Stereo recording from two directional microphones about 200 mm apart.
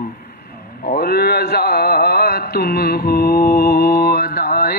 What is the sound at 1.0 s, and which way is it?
Mantra, 50° left (ahead or behind).